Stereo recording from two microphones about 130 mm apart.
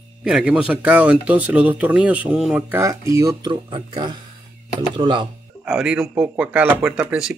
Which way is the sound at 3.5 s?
40° right (ahead or behind).